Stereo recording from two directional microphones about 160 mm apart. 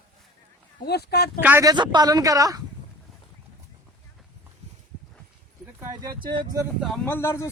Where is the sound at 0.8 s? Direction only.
90° left.